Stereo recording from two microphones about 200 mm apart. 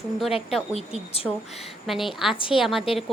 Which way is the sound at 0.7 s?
30° left (ahead or behind).